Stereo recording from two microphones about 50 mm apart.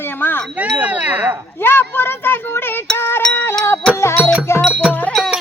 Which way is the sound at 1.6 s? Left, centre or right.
Left.